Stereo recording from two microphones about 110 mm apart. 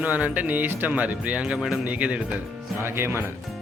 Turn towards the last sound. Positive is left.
turn(degrees=-20)  # may be behind; listen again after turning